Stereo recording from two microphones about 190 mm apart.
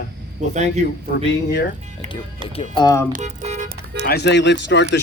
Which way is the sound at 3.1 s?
40° right (ahead or behind).